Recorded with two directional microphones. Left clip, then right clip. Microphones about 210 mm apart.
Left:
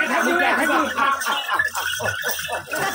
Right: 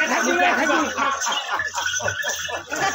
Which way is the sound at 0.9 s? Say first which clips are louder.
Left 2 dB; 45° left (ahead or behind).